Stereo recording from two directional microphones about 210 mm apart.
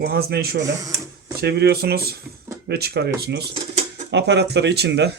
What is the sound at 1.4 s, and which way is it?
Speech, 50° right (ahead or behind).